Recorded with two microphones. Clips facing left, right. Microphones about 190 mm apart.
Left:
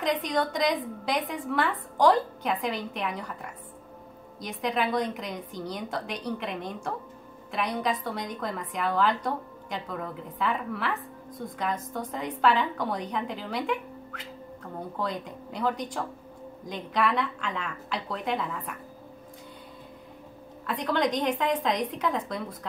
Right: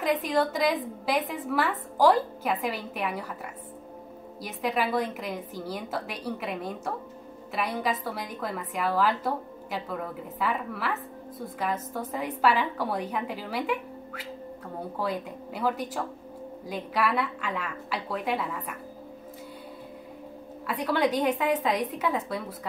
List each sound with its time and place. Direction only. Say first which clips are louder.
0.0 s a woman's voice: right 2 dB; 5° right (ahead or behind)
4.4 s a woman's voice: even; 5° right (ahead or behind)
20.6 s a woman's voice: right 1 dB; 10° right (ahead or behind)